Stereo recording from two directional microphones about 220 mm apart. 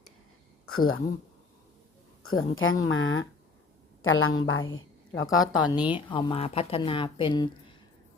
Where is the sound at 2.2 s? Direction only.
70° left (ahead or behind).